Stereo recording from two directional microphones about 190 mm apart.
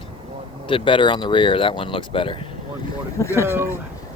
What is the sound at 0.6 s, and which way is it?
Speech, 25° left (ahead or behind).